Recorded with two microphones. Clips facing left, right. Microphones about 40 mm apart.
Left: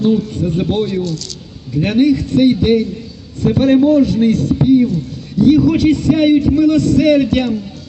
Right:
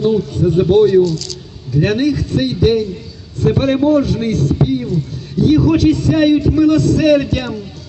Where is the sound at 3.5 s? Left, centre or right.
Right.